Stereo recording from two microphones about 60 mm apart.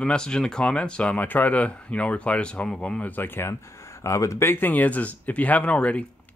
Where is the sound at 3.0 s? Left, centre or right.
Left.